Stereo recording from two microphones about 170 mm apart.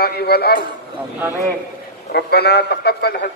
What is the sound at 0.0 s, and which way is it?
Speech, 65° left (ahead or behind).